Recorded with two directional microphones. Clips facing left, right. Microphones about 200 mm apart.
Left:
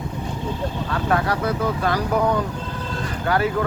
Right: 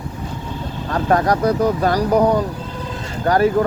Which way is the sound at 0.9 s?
40° right (ahead or behind).